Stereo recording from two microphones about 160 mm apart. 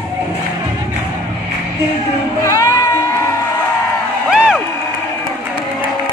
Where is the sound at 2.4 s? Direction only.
20° left (ahead or behind).